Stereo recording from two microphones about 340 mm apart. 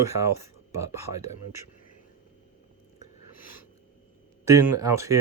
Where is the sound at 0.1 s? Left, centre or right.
Right.